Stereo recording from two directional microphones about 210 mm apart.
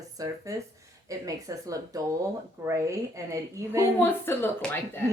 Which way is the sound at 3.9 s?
10° left (ahead or behind).